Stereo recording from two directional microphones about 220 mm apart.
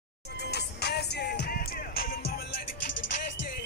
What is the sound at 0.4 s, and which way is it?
Music, 50° left (ahead or behind).